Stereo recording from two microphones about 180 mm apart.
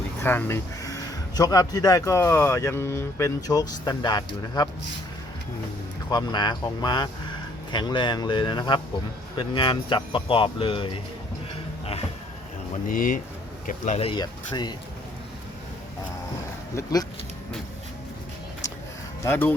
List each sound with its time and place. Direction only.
0.2 s speech: 10° left (ahead or behind)
6.1 s speech: 25° left (ahead or behind)
12.9 s speech: 50° left (ahead or behind)
14.1 s speech: 25° left (ahead or behind)
16.7 s speech: 20° left (ahead or behind)
19.2 s speech: 10° left (ahead or behind)